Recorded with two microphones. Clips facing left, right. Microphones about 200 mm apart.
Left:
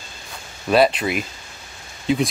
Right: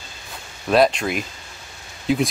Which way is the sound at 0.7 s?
5° left (ahead or behind).